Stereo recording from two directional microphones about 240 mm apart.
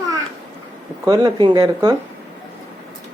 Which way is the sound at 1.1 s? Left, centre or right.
Centre.